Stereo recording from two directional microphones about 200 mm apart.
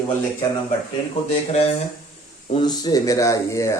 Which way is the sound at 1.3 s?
30° left (ahead or behind).